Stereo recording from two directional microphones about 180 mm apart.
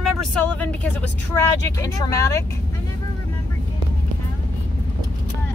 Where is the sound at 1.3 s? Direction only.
15° left (ahead or behind).